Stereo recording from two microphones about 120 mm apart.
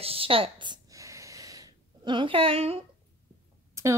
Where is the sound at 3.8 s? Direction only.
25° right (ahead or behind).